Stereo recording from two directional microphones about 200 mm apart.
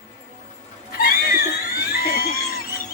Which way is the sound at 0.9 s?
45° left (ahead or behind).